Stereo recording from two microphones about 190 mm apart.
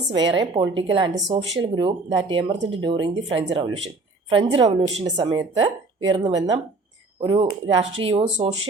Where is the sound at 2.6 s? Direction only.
90° right.